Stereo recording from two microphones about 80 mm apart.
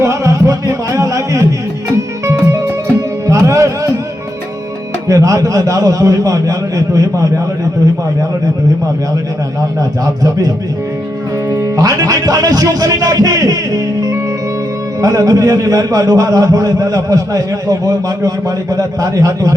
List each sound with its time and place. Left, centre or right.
0.0 s music: right
5.0 s a man's voice: right
10.2 s a man's voice: right
11.5 s a man's voice: right